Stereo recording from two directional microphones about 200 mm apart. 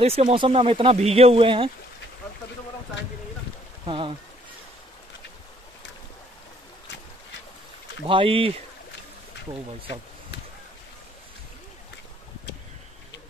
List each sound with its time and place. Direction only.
0.0 s speech: 30° right (ahead or behind)
3.8 s speech: 25° right (ahead or behind)
8.1 s speech: 25° right (ahead or behind)